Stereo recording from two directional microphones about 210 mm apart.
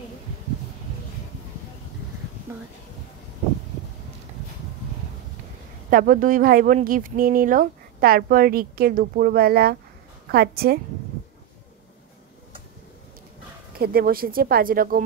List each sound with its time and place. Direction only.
5.9 s speech: 40° right (ahead or behind)
13.7 s speech: 45° right (ahead or behind)